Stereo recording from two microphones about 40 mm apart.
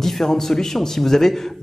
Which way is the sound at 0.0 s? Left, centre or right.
Centre.